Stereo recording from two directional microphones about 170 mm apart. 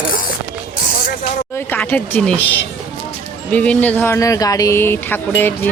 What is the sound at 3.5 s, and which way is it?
Speech, 10° left (ahead or behind).